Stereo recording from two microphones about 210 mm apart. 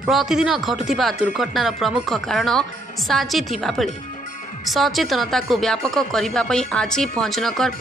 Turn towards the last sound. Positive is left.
turn(degrees=0)  # may be behind; listen again after turning